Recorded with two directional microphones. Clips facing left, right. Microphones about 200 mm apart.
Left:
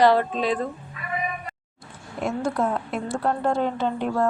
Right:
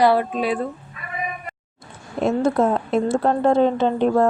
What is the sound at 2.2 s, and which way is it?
A woman's voice, 25° right (ahead or behind).